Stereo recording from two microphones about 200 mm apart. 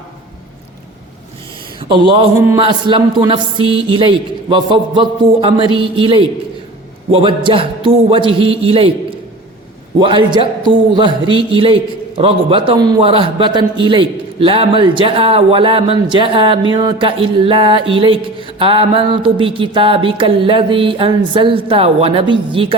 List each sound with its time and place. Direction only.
1.9 s a man's voice: 25° right (ahead or behind)